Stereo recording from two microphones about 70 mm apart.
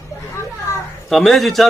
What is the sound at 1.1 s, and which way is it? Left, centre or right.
Speech, centre.